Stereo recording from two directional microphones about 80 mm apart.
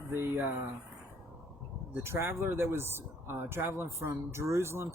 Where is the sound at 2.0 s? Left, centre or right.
Right.